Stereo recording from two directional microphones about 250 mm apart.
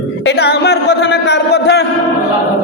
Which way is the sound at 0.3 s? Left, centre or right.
Left.